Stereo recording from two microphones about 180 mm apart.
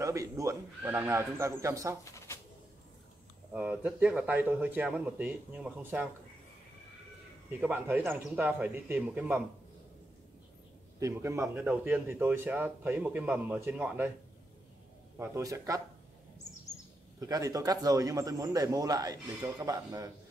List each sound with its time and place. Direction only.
0.0 s a man's voice: 20° right (ahead or behind)
2.1 s a sound: 15° left (ahead or behind)
3.5 s a man's voice: 5° right (ahead or behind)
7.6 s a man's voice: 10° right (ahead or behind)
11.0 s a man's voice: 15° right (ahead or behind)
11.4 s a man's voice: 5° right (ahead or behind)
15.1 s a man's voice: 15° right (ahead or behind)
17.2 s a man's voice: 20° right (ahead or behind)